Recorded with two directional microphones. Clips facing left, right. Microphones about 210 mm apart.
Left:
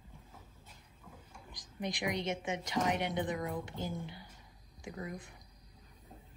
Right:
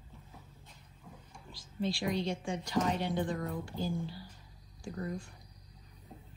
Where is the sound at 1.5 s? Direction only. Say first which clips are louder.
Right 5 dB; 15° left (ahead or behind).